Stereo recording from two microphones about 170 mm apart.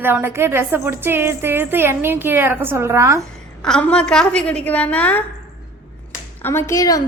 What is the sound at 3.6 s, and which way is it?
A woman's voice, 5° left (ahead or behind).